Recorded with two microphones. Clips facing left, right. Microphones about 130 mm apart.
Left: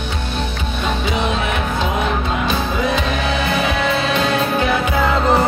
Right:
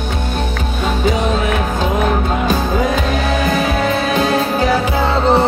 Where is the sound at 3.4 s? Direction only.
45° right (ahead or behind).